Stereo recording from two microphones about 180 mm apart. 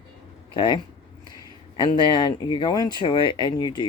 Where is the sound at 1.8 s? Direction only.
25° left (ahead or behind).